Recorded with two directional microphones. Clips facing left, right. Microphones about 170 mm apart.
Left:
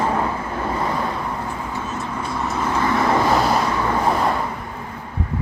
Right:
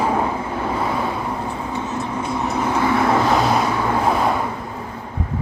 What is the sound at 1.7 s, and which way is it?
Vehicle, 20° right (ahead or behind).